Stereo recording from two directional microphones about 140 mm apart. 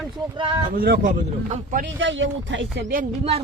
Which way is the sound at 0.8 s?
75° right (ahead or behind).